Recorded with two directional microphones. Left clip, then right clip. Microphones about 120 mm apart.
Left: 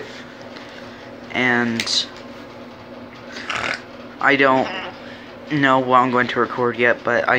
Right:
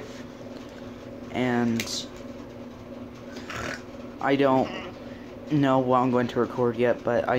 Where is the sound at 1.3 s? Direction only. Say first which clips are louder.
Left 8 dB; centre (ahead or behind).